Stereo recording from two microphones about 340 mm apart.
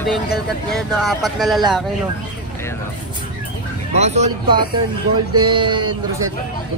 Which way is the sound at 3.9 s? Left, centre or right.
Centre.